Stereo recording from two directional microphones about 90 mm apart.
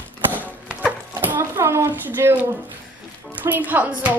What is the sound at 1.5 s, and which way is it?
A woman's voice, 30° right (ahead or behind).